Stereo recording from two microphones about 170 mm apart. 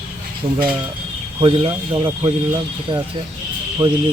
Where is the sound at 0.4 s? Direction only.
30° right (ahead or behind).